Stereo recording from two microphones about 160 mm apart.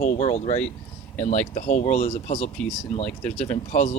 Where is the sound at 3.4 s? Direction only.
50° left (ahead or behind).